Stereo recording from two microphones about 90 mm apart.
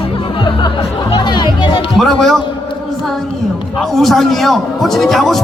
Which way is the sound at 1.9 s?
5° left (ahead or behind).